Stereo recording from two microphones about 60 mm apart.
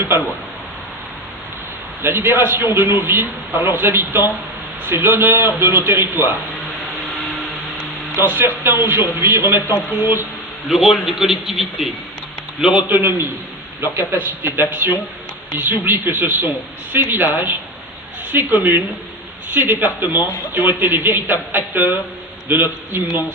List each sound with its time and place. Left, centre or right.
2.0 s a man's voice: right
8.2 s a man's voice: right
10.7 s a man's voice: centre
12.9 s a man's voice: right
14.4 s a man's voice: right